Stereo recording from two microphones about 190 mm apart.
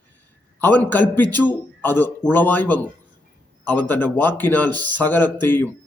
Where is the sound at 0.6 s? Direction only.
10° left (ahead or behind).